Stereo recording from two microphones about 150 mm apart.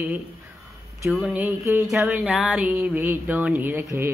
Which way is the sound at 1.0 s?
Centre (ahead or behind).